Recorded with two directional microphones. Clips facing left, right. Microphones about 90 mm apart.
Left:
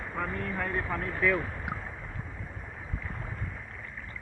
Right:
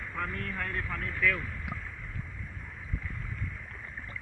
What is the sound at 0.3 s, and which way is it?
Speech, 15° left (ahead or behind).